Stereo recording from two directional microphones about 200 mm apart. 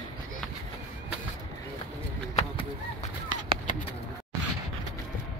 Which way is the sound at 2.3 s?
35° left (ahead or behind).